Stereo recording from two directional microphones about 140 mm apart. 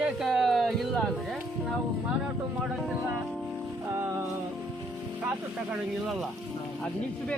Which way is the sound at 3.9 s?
15° right (ahead or behind).